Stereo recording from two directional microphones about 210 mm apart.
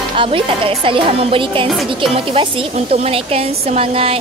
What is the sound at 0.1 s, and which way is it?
Speech, 25° right (ahead or behind).